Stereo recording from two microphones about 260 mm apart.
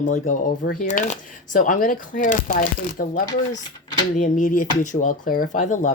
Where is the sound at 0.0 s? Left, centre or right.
Left.